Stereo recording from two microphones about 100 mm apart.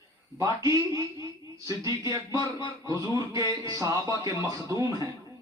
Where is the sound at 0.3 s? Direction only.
35° right (ahead or behind).